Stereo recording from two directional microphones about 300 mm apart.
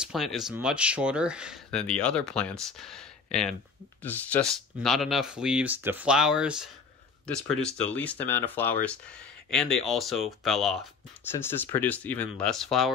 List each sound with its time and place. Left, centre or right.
0.0 s speech: centre